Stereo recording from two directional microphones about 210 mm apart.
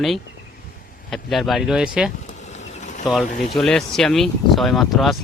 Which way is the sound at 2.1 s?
35° left (ahead or behind).